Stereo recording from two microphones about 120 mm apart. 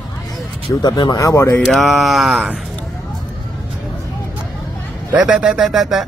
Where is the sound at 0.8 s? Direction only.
35° left (ahead or behind).